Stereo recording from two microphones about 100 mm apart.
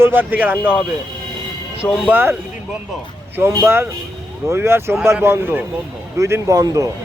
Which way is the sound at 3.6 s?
25° right (ahead or behind).